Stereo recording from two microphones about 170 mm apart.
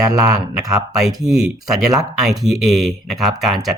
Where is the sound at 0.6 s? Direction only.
Centre (ahead or behind).